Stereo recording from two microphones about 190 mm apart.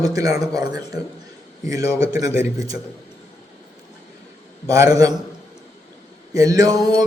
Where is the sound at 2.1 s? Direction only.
15° right (ahead or behind).